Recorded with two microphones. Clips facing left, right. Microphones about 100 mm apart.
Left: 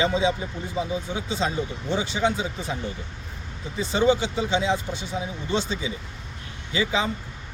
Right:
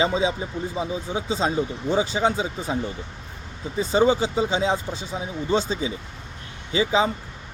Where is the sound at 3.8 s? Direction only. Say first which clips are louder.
Right 2 dB; 40° right (ahead or behind).